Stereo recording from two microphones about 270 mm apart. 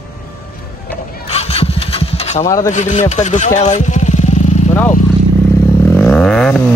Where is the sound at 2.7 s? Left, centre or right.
Left.